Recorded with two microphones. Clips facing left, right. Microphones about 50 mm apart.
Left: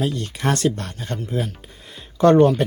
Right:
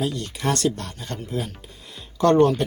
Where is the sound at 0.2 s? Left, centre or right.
Left.